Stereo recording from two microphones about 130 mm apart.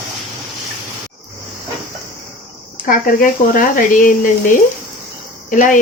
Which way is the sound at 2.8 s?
90° left.